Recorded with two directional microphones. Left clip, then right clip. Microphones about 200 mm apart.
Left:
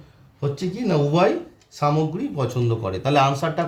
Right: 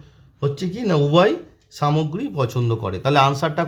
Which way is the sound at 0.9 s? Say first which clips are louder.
Right 3 dB; 40° right (ahead or behind).